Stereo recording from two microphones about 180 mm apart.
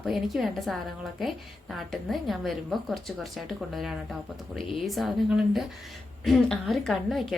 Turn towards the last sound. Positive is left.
turn(degrees=0)  # may be behind; listen again after turning